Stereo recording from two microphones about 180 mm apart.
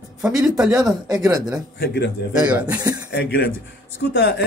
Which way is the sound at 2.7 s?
20° right (ahead or behind).